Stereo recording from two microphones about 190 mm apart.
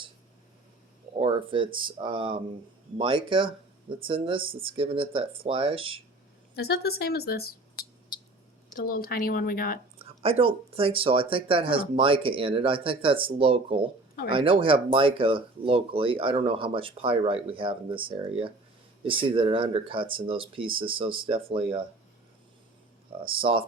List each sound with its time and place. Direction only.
1.2 s speech: 25° right (ahead or behind)
6.6 s speech: 55° left (ahead or behind)
8.7 s speech: 50° left (ahead or behind)
10.0 s speech: 30° right (ahead or behind)
23.2 s speech: 30° right (ahead or behind)